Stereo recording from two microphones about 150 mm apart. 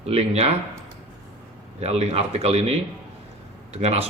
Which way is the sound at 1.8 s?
45° right (ahead or behind).